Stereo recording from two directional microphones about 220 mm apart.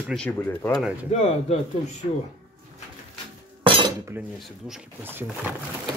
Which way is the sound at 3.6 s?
25° right (ahead or behind).